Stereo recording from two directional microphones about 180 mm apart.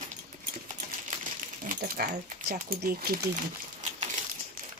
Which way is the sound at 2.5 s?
55° right (ahead or behind).